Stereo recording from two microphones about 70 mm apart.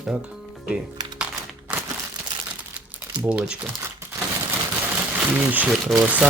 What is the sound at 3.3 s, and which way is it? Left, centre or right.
Speech, centre.